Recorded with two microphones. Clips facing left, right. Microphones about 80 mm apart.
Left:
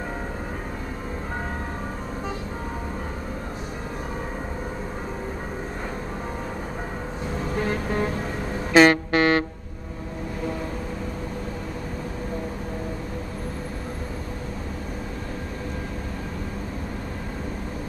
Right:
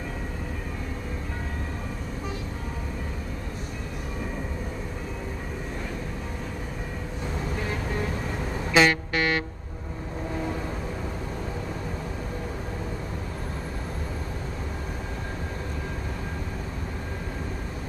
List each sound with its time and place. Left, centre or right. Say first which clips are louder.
7.6 s vehicle: left 7 dB; left
8.7 s music: left 6 dB; left